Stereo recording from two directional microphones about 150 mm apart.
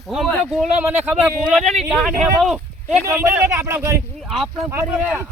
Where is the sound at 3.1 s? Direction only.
10° right (ahead or behind).